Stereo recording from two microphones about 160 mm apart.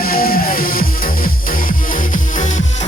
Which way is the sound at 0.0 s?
65° left (ahead or behind).